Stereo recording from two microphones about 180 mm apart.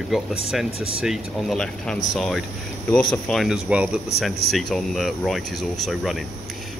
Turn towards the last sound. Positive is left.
turn(degrees=0)  # may be behind; listen again after turning